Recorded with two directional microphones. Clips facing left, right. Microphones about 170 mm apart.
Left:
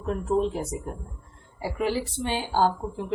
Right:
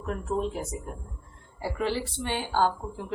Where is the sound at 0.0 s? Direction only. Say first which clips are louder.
Left 5 dB; 25° left (ahead or behind).